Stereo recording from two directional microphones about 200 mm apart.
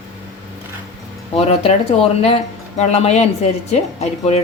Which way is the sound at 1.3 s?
35° left (ahead or behind).